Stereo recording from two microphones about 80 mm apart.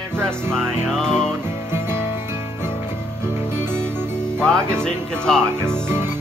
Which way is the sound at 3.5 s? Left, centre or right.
Right.